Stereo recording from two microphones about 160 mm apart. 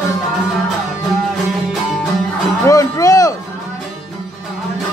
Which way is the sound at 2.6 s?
20° left (ahead or behind).